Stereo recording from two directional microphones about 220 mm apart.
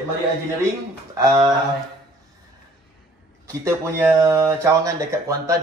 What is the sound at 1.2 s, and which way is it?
Speech, 20° right (ahead or behind).